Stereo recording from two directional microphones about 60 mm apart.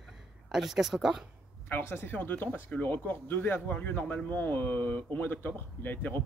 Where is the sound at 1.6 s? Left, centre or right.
Left.